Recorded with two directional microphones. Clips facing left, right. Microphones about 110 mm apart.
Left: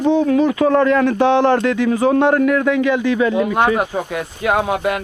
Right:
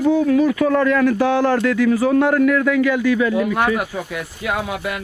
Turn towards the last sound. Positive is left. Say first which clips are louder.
# left 6 dB
turn(degrees=50)  # may be behind; listen again after turning